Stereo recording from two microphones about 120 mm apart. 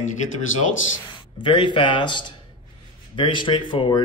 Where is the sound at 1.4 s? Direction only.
40° left (ahead or behind).